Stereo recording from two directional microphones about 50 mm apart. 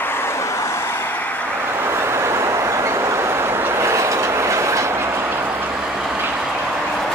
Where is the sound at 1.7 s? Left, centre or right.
Right.